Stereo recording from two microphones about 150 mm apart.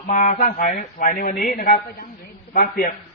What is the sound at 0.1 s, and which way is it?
A man's voice, 60° left (ahead or behind).